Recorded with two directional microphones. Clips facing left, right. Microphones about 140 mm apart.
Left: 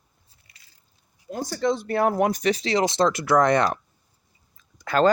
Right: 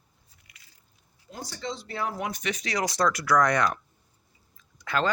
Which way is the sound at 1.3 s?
50° left (ahead or behind).